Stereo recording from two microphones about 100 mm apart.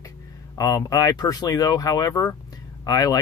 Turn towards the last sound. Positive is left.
turn(degrees=40)  # may be behind; listen again after turning